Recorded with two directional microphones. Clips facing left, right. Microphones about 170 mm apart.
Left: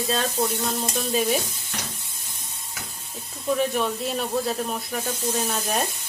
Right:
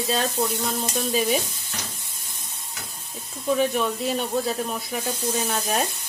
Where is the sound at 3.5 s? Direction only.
Centre (ahead or behind).